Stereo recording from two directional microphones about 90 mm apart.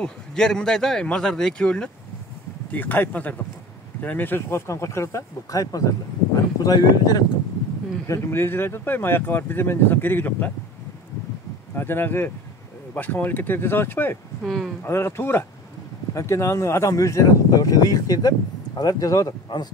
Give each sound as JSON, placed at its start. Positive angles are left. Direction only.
{"t": 0.0, "sound": "speech", "side_deg": 10}
{"t": 8.1, "sound": "speech", "side_deg": 25}
{"t": 11.7, "sound": "speech", "side_deg": 25}
{"t": 14.4, "sound": "speech", "side_deg": 0}
{"t": 14.8, "sound": "speech", "side_deg": 30}